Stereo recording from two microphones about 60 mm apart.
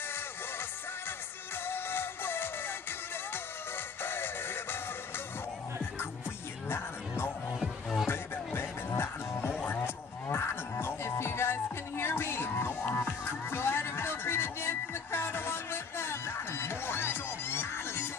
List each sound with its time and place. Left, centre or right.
1.7 s music: left
4.0 s music: left
6.7 s music: left
7.6 s music: centre
8.1 s music: left